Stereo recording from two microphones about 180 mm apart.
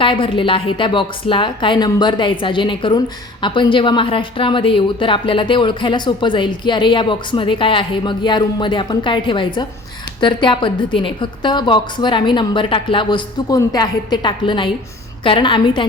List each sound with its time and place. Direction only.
0.0 s speech: 30° left (ahead or behind)